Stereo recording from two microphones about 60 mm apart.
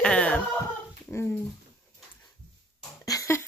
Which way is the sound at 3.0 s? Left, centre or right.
Left.